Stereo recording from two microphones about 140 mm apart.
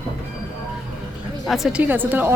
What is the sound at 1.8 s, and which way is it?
Speech, 15° right (ahead or behind).